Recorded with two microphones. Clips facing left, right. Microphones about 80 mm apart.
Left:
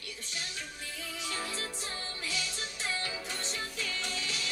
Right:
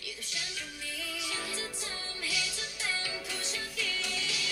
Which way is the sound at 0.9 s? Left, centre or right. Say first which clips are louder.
Left 1 dB; left.